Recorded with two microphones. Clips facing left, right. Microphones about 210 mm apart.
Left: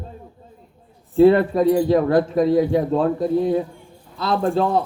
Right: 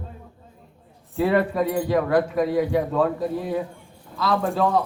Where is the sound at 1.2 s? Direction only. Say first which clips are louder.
Left 7 dB; 30° left (ahead or behind).